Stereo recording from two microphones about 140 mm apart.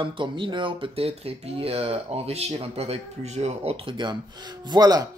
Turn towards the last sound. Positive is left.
turn(degrees=-30)  # may be behind; listen again after turning